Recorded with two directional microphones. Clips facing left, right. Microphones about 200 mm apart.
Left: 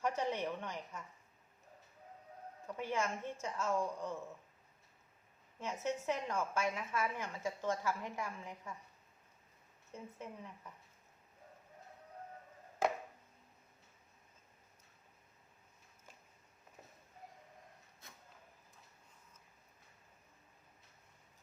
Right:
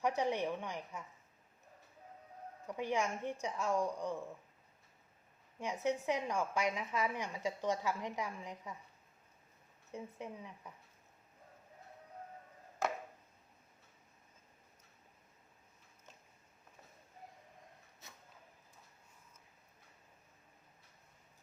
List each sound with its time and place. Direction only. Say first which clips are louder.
0.0 s a woman's voice: right 2 dB; 15° right (ahead or behind)
2.6 s a woman's voice: right 2 dB; 15° right (ahead or behind)
5.5 s a woman's voice: right 3 dB; 15° right (ahead or behind)
9.9 s a woman's voice: right 3 dB; 15° right (ahead or behind)